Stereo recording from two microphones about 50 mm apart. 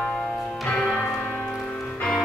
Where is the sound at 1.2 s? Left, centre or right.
Left.